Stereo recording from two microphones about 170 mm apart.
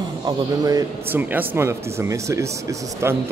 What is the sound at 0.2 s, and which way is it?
Speech, 20° right (ahead or behind).